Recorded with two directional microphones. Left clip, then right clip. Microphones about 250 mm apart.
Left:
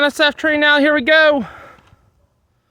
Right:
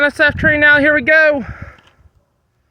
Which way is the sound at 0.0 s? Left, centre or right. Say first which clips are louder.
Right 2 dB; centre.